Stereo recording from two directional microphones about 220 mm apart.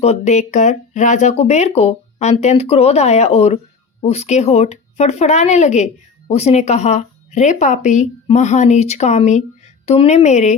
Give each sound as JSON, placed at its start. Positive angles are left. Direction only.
{"t": 0.0, "sound": "speech", "side_deg": 30}